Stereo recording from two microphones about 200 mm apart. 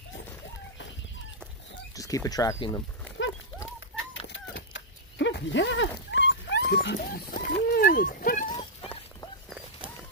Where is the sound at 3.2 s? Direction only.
65° left (ahead or behind).